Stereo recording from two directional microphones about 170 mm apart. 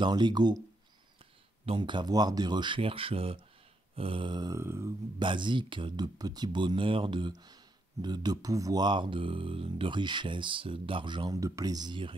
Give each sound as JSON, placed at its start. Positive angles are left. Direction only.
{"t": 0.0, "sound": "speech", "side_deg": -25}
{"t": 1.7, "sound": "speech", "side_deg": -30}
{"t": 5.2, "sound": "speech", "side_deg": -30}